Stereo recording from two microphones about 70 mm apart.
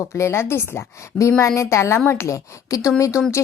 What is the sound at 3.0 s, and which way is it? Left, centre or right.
Speech, left.